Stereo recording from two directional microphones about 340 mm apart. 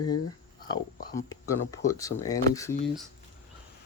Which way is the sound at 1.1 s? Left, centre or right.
Centre.